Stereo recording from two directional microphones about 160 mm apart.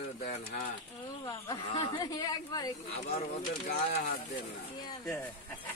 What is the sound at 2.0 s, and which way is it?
Speech, 25° left (ahead or behind).